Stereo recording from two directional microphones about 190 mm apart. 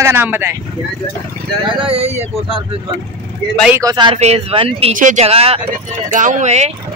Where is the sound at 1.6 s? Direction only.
30° right (ahead or behind).